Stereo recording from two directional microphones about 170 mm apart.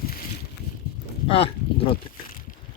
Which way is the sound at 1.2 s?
35° left (ahead or behind).